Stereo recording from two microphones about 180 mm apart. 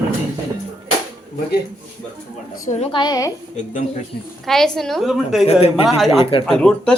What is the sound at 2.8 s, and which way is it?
Speech, 25° left (ahead or behind).